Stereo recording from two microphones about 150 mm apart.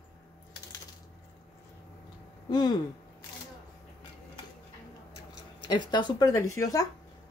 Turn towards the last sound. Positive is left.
turn(degrees=20)  # may be behind; listen again after turning